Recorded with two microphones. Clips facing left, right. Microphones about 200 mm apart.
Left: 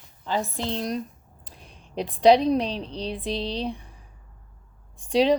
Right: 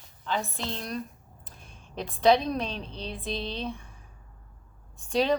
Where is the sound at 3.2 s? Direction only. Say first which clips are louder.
Left 3 dB; 75° left (ahead or behind).